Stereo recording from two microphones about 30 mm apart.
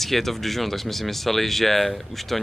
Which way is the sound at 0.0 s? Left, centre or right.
Centre.